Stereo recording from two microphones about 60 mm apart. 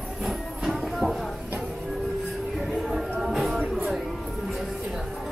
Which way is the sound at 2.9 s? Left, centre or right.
Centre.